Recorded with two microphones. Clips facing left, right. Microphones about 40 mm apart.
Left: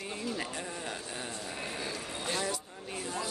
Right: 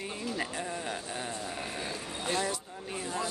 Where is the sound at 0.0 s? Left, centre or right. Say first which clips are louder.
Right 1 dB; centre.